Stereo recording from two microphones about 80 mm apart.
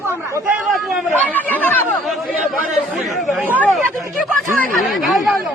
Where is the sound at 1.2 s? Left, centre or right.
Left.